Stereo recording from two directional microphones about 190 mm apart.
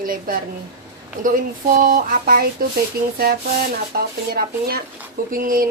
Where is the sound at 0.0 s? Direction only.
50° right (ahead or behind).